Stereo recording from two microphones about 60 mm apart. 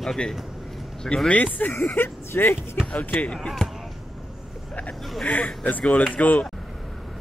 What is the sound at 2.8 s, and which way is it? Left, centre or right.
Speech, left.